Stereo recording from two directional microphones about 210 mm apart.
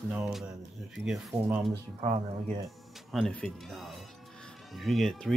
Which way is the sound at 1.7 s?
30° right (ahead or behind).